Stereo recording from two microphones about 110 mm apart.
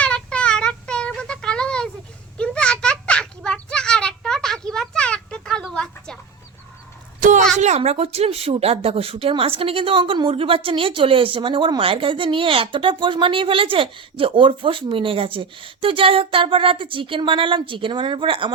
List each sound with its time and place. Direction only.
0.0 s child singing: 10° left (ahead or behind)
2.4 s a sound: 10° left (ahead or behind)
7.6 s speech: 85° right; by 18.5 s 50° right (ahead or behind)